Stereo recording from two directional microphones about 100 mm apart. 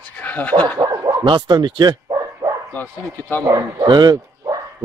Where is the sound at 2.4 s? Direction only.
35° right (ahead or behind).